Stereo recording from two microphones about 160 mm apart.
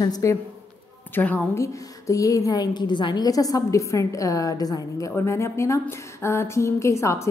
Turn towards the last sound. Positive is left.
turn(degrees=20)  # may be behind; listen again after turning